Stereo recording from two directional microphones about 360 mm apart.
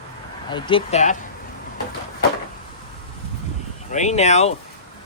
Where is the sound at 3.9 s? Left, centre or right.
Centre.